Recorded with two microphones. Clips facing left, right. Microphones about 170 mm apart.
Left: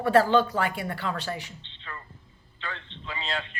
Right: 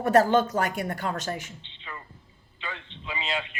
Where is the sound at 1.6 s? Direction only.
15° right (ahead or behind).